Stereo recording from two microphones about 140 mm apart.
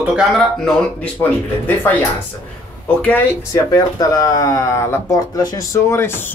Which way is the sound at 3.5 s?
25° left (ahead or behind).